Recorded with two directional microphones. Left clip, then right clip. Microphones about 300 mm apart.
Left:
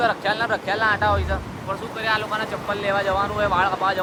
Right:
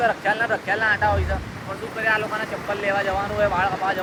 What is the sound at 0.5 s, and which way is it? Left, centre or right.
Speech, centre.